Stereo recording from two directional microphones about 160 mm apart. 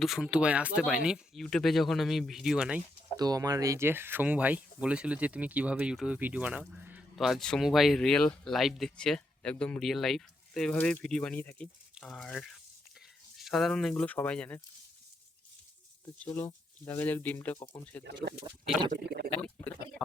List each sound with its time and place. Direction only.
0.0 s speech: centre (ahead or behind)
3.2 s speech: 25° right (ahead or behind); by 14.6 s 5° left (ahead or behind)
16.0 s speech: 10° left (ahead or behind)
18.9 s speech: 75° right (ahead or behind)
19.3 s speech: 10° left (ahead or behind)